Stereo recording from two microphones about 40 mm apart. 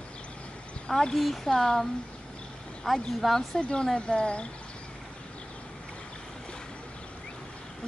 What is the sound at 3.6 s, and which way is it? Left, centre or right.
Speech, left.